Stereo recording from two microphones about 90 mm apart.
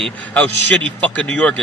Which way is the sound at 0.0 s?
15° left (ahead or behind).